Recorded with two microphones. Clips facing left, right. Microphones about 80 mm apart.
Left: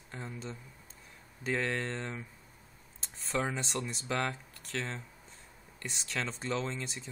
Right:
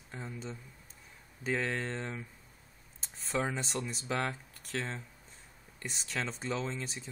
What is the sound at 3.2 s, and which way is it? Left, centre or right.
Speech, centre.